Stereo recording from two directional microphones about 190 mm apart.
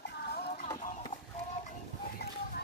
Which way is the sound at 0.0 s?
55° left (ahead or behind).